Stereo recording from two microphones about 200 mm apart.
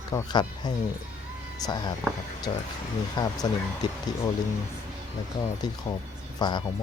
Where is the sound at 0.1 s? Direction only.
20° left (ahead or behind).